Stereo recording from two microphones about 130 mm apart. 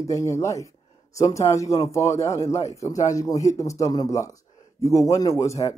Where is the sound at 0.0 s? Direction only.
25° left (ahead or behind).